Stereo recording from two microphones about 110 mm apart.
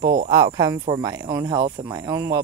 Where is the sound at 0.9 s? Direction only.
30° right (ahead or behind).